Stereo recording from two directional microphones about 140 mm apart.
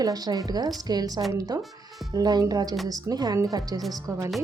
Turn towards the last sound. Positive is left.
turn(degrees=-25)  # may be behind; listen again after turning